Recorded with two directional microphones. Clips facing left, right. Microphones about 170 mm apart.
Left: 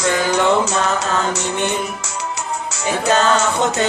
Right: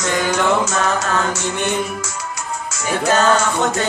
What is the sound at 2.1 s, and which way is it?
Music, 30° left (ahead or behind).